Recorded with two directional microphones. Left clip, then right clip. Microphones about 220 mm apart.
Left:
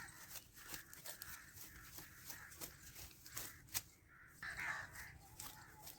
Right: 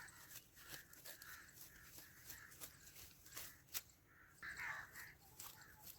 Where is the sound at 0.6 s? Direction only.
10° left (ahead or behind).